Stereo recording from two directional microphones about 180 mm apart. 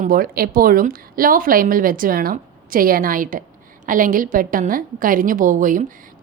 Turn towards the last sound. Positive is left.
turn(degrees=-45)  # may be behind; listen again after turning